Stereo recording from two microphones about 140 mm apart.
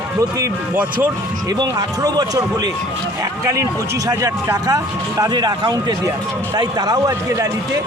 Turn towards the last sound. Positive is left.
turn(degrees=-25)  # may be behind; listen again after turning